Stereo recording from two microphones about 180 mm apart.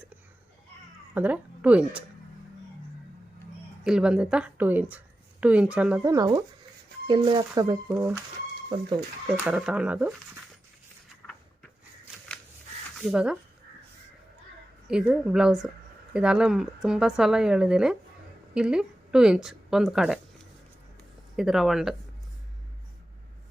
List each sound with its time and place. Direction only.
1.1 s speech: 10° right (ahead or behind)
3.8 s speech: 5° right (ahead or behind)
9.4 s speech: 5° right (ahead or behind)
13.0 s speech: 5° right (ahead or behind)
14.8 s speech: 5° right (ahead or behind)
21.3 s speech: centre (ahead or behind)